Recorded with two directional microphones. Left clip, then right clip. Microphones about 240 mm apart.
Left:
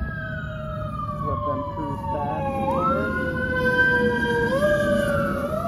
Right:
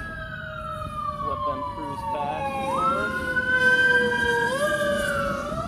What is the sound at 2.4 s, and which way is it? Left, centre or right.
Emergency vehicle, right.